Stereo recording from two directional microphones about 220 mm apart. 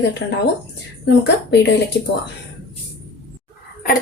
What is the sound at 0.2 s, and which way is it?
Speech, 55° left (ahead or behind).